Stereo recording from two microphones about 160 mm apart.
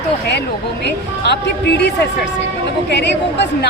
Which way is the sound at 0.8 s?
90° left.